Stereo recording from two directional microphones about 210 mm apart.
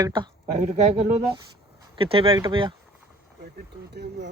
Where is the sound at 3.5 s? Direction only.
50° right (ahead or behind).